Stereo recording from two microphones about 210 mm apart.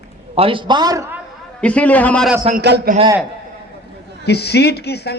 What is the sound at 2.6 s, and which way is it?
Speech, 55° right (ahead or behind).